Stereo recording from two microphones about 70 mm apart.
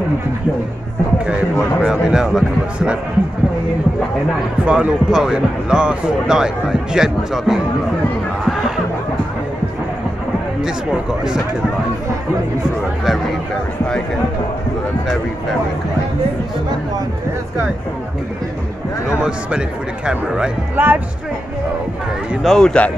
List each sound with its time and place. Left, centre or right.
1.2 s speech: centre
4.6 s speech: centre
8.5 s a sound: centre
10.6 s speech: centre
19.0 s speech: centre
20.7 s speech: right
22.4 s speech: centre